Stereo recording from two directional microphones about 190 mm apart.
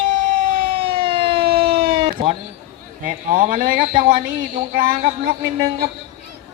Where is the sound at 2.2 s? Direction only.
30° right (ahead or behind).